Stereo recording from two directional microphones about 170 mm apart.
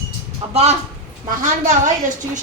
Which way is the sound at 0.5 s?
40° right (ahead or behind).